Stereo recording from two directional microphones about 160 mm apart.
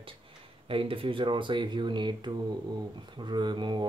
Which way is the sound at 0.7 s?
35° right (ahead or behind).